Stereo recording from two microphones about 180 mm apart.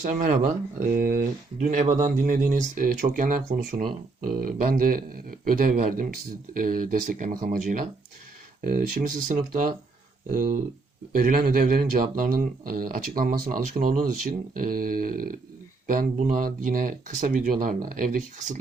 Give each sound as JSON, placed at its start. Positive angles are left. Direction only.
{"t": 0.0, "sound": "speech", "side_deg": -45}